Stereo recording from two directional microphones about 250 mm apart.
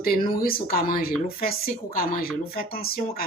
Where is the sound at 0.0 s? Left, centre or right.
Left.